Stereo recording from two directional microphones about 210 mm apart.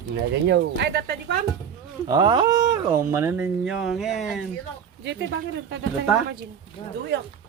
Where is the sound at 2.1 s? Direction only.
20° right (ahead or behind); by 4.4 s centre (ahead or behind).